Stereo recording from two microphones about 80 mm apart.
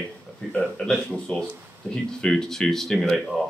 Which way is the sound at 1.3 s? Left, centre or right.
Centre.